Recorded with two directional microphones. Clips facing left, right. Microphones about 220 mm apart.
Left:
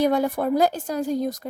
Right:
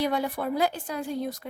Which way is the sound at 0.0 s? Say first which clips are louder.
Left 6 dB; 45° left (ahead or behind).